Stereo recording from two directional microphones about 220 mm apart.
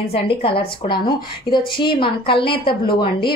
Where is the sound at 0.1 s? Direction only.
25° left (ahead or behind).